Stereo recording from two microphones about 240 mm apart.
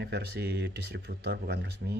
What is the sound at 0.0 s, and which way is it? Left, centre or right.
Speech, right.